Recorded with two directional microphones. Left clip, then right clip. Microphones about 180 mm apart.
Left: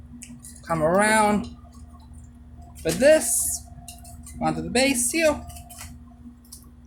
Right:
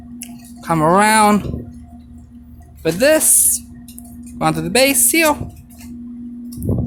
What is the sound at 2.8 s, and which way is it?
Speech, 50° right (ahead or behind).